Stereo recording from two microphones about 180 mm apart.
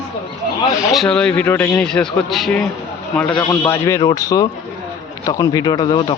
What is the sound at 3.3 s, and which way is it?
Speech, 20° left (ahead or behind).